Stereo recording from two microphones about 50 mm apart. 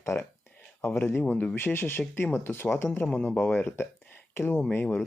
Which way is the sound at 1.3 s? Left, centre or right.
Left.